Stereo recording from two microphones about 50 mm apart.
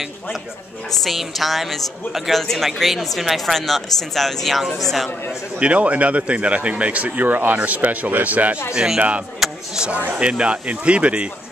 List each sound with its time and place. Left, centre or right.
1.0 s a woman's voice: centre
5.6 s speech: right
8.7 s speech: centre
9.4 s a sound: centre
10.1 s speech: right